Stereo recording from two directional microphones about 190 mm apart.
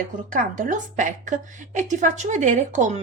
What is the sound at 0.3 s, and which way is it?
A woman's voice, 45° right (ahead or behind).